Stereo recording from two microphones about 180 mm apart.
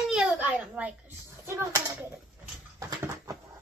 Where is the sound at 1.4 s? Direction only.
15° right (ahead or behind).